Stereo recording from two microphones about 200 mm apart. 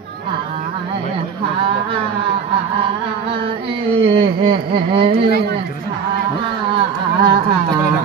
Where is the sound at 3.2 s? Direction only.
25° right (ahead or behind).